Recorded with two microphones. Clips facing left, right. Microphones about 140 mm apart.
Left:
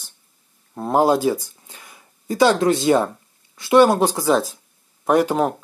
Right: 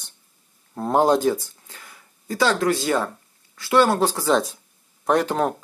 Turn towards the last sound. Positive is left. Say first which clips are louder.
# left 3 dB
turn(degrees=10)  # may be behind; listen again after turning